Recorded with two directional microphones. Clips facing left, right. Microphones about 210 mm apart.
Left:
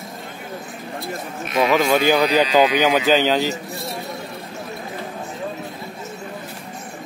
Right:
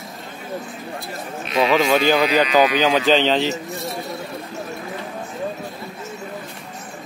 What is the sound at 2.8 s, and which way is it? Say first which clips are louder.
Speech: even; 10° left (ahead or behind).